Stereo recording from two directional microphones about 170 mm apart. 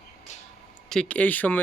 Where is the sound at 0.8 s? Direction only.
5° left (ahead or behind).